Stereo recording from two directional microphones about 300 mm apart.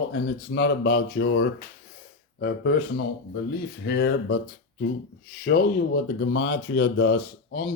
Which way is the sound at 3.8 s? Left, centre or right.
Left.